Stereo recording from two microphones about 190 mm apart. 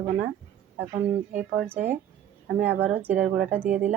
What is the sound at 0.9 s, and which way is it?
Speech, 40° right (ahead or behind).